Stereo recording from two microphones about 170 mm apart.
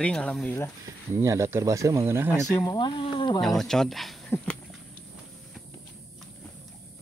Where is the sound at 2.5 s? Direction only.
20° left (ahead or behind).